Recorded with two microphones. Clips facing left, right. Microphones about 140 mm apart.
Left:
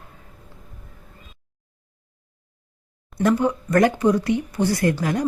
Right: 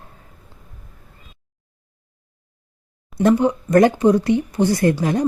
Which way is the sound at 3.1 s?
20° right (ahead or behind).